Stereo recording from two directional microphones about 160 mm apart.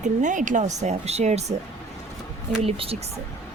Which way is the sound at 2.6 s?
35° right (ahead or behind).